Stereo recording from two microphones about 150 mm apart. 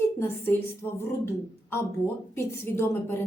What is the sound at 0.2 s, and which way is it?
A woman's voice, 15° left (ahead or behind).